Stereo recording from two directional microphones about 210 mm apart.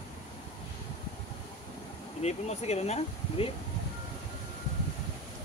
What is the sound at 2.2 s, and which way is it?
Speech, 30° left (ahead or behind).